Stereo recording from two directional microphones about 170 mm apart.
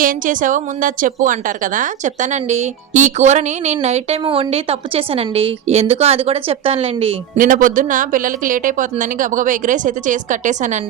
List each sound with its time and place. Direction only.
0.0 s a woman's voice: 50° right (ahead or behind); by 7.2 s 35° right (ahead or behind)
7.3 s speech: 50° right (ahead or behind)